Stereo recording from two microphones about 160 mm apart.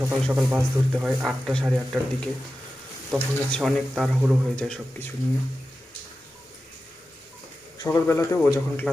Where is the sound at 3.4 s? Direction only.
5° left (ahead or behind).